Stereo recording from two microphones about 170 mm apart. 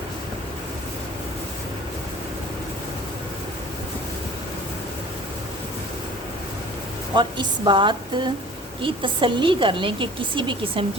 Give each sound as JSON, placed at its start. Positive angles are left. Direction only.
{"t": 7.2, "sound": "a woman's voice", "side_deg": -25}